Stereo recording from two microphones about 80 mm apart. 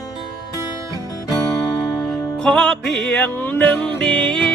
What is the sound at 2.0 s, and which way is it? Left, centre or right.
Music, centre.